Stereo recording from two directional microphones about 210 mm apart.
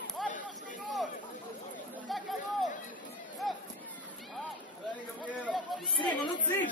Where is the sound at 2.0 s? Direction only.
Centre (ahead or behind).